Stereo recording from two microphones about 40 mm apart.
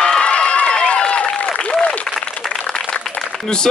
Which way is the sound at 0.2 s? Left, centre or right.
Left.